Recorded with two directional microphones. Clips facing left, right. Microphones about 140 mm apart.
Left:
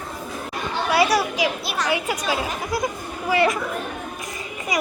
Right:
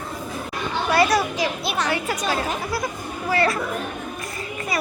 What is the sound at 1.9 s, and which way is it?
Speech, 10° left (ahead or behind).